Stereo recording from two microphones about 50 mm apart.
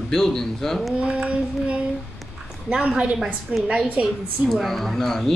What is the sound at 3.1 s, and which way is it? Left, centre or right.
Speech, centre.